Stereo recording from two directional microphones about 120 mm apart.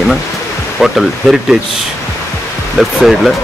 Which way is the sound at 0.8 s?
5° right (ahead or behind).